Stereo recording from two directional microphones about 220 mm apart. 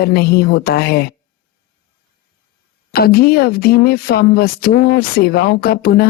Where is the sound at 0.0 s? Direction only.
45° left (ahead or behind).